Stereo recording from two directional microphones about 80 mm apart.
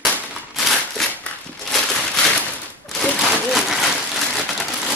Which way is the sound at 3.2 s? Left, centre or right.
Centre.